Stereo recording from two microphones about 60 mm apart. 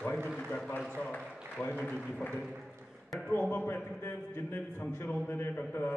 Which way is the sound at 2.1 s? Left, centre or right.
Centre.